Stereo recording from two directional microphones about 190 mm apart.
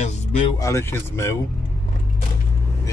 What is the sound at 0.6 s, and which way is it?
Speech, 15° left (ahead or behind).